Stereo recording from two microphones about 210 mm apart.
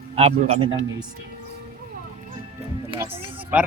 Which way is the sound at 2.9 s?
25° right (ahead or behind).